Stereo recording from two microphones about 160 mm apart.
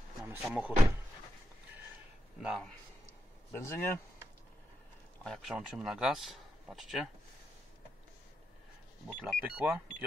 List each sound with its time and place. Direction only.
0.2 s speech: 5° right (ahead or behind)
2.4 s speech: centre (ahead or behind)
3.5 s speech: 15° left (ahead or behind)
5.2 s speech: centre (ahead or behind)
9.0 s speech: 5° right (ahead or behind)